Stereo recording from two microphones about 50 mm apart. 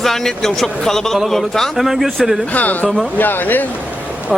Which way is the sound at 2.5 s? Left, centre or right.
Left.